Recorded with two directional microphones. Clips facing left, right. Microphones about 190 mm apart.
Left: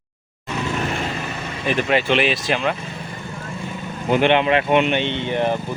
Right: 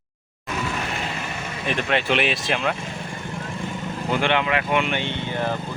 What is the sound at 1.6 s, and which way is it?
Speech, 5° left (ahead or behind).